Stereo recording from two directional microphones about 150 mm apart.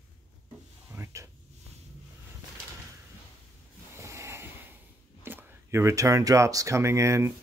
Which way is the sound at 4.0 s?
20° right (ahead or behind).